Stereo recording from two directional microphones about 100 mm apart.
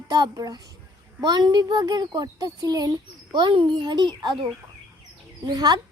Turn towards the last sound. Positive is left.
turn(degrees=-40)  # may be behind; listen again after turning